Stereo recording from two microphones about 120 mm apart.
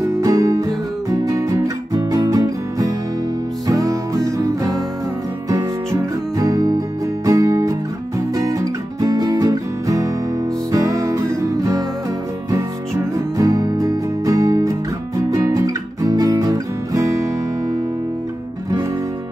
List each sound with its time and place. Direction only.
0.0 s music: 25° right (ahead or behind)